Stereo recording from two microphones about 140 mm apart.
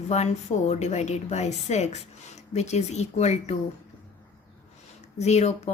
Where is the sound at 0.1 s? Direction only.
50° left (ahead or behind).